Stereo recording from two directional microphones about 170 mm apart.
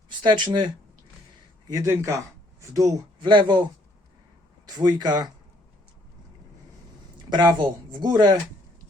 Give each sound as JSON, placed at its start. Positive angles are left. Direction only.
{"t": 0.2, "sound": "speech", "side_deg": -25}
{"t": 7.3, "sound": "speech", "side_deg": -25}